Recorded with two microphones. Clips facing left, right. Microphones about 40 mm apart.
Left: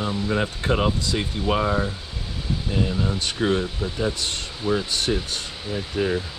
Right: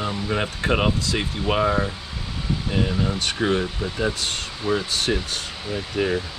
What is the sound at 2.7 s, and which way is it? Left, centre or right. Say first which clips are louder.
Speech: right 1 dB; right.